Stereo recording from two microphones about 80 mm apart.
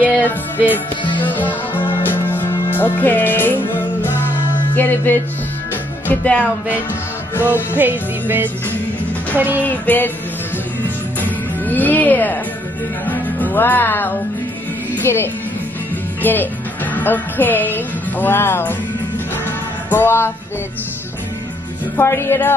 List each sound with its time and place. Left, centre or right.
0.0 s music: right
1.2 s music: left
7.7 s music: right
9.7 s music: left
11.1 s music: left
15.1 s speech: left
16.2 s speech: left
19.9 s music: left
21.9 s speech: left